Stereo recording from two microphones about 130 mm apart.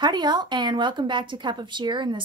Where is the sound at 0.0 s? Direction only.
35° right (ahead or behind).